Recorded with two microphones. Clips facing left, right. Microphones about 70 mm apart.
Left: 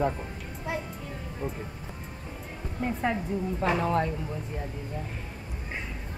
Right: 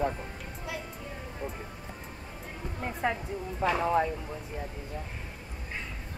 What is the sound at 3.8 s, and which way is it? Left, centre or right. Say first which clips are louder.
Speech: right 3 dB; centre.